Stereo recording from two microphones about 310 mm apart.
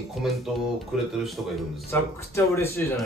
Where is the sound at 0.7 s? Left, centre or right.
Centre.